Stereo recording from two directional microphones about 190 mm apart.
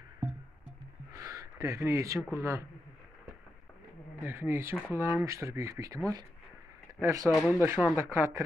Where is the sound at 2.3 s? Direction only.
15° right (ahead or behind).